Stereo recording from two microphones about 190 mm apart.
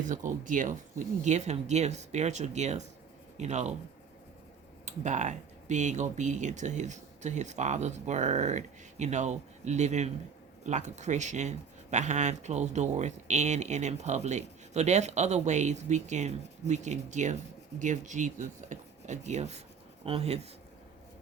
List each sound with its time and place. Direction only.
0.0 s speech: 40° right (ahead or behind)
4.9 s speech: 40° right (ahead or behind)